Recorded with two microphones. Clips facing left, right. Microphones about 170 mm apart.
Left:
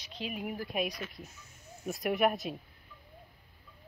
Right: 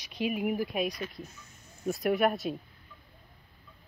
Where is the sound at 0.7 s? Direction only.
Centre (ahead or behind).